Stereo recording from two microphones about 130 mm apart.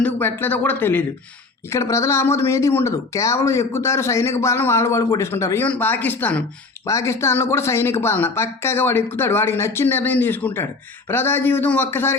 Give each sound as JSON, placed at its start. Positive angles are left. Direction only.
{"t": 0.0, "sound": "speech", "side_deg": 15}